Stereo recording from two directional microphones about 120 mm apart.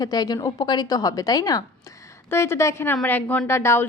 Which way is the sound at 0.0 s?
35° left (ahead or behind).